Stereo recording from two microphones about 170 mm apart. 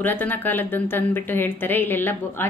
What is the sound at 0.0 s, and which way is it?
Speech, 10° left (ahead or behind).